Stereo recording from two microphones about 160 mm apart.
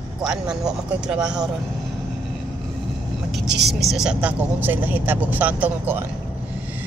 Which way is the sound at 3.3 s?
90° right.